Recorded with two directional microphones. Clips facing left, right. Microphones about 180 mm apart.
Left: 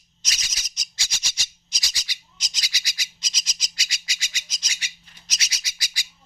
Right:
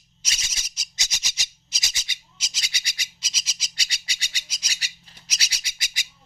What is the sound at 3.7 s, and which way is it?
Squawk, 30° right (ahead or behind).